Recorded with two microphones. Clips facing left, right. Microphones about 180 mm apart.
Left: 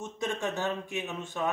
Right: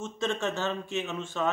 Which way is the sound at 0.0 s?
15° left (ahead or behind).